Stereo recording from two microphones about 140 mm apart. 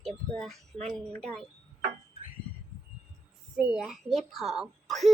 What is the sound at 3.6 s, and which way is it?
A woman's voice, 5° right (ahead or behind).